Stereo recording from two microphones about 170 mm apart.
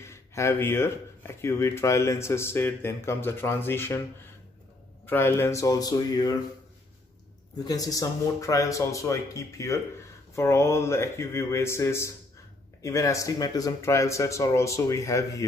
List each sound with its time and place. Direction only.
0.0 s speech: 15° left (ahead or behind)
5.0 s speech: 15° left (ahead or behind)
7.5 s speech: 20° left (ahead or behind)